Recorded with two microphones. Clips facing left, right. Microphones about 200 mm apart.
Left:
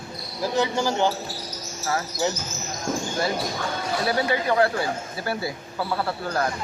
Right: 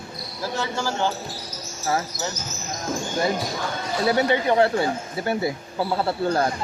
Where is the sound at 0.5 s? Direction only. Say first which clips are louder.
Left 4 dB; 15° left (ahead or behind).